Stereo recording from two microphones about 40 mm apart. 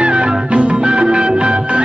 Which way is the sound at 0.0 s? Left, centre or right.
Right.